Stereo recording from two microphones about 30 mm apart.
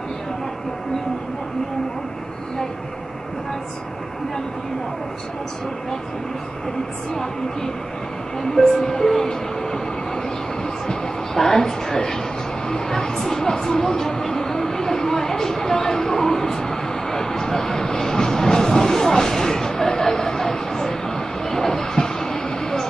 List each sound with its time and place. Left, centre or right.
8.4 s speech: centre
11.3 s a woman's voice: centre
12.6 s a sound: centre